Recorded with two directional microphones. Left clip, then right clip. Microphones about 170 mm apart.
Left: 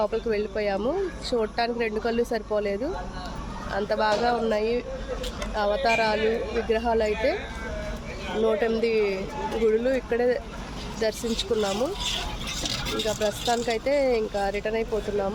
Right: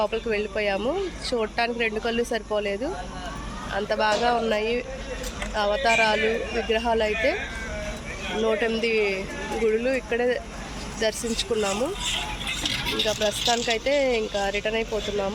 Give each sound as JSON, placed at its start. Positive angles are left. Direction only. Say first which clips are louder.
{"t": 0.0, "sound": "speech", "louder": "even", "side_deg": 0}
{"t": 8.4, "sound": "speech", "louder": "even", "side_deg": 0}
{"t": 12.6, "sound": "a sound", "louder": "right 3 dB", "side_deg": 90}
{"t": 13.7, "sound": "speech", "louder": "right 1 dB", "side_deg": -5}